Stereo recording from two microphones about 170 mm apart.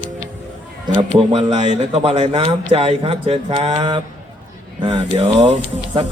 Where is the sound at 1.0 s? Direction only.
30° right (ahead or behind).